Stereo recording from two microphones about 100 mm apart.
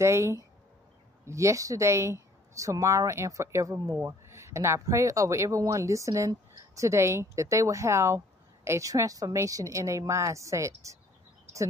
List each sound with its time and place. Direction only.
0.0 s speech: 30° right (ahead or behind)